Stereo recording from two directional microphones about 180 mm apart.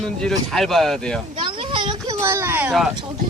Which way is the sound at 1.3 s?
30° right (ahead or behind).